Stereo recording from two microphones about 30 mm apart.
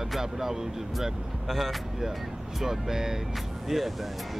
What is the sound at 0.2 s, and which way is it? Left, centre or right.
Speech, centre.